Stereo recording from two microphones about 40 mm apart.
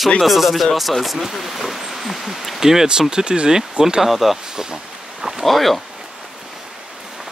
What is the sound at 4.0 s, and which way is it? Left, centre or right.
Speech, centre.